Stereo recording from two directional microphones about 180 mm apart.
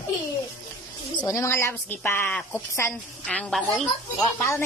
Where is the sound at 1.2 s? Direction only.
15° left (ahead or behind).